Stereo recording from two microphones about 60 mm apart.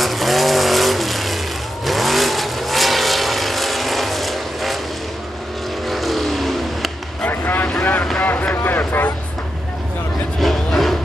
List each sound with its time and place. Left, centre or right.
0.0 s vehicle: centre
5.9 s vehicle: centre
7.2 s vehicle: left
10.4 s a sound: centre